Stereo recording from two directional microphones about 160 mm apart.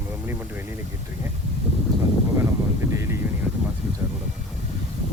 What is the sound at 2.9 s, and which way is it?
Vehicle, 15° right (ahead or behind).